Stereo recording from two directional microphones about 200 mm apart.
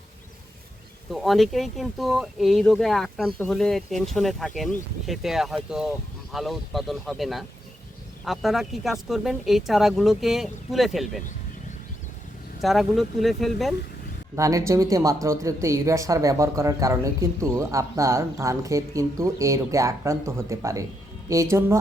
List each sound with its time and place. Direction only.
1.1 s speech: centre (ahead or behind)
12.6 s speech: centre (ahead or behind)
14.3 s speech: 15° right (ahead or behind)